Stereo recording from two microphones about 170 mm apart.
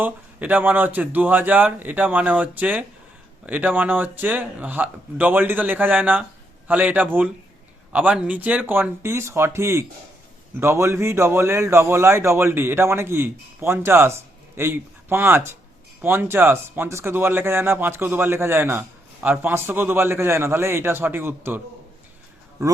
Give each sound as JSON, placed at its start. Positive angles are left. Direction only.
{"t": 0.0, "sound": "speech", "side_deg": -10}
{"t": 22.6, "sound": "speech", "side_deg": -20}